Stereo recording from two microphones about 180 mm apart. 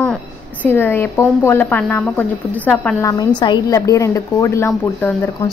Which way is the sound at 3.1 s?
25° left (ahead or behind).